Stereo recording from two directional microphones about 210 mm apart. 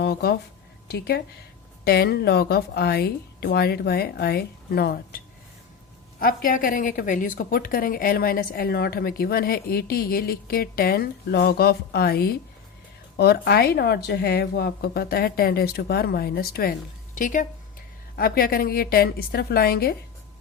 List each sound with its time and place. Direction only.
0.0 s a woman's voice: 50° left (ahead or behind)